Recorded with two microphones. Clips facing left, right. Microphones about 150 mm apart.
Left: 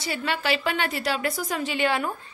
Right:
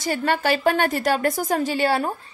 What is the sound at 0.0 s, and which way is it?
A woman's voice, 45° right (ahead or behind).